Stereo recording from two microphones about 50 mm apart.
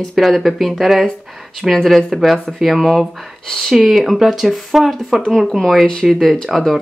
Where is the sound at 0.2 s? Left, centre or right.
Centre.